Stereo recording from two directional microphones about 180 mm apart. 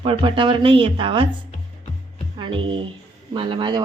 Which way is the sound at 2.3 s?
25° right (ahead or behind).